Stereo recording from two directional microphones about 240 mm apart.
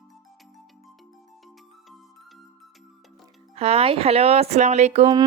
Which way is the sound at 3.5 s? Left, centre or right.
Right.